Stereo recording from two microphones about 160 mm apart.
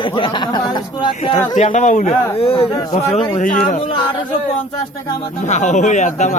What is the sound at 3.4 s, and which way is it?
Speech, 55° left (ahead or behind).